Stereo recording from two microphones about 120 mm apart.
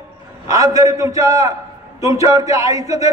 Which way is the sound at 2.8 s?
70° left (ahead or behind).